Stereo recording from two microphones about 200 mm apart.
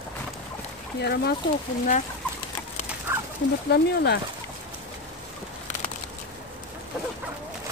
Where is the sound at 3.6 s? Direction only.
55° left (ahead or behind).